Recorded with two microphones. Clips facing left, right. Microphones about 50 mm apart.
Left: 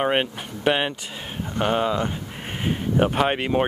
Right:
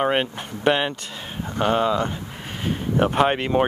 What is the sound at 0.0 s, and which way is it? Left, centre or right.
Speech, centre.